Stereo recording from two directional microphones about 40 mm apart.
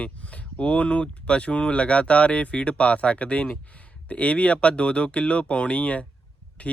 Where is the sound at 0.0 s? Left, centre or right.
Left.